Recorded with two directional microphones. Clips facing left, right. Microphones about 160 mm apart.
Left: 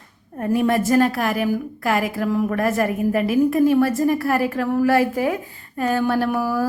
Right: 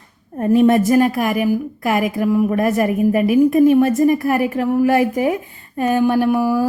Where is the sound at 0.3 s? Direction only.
25° right (ahead or behind).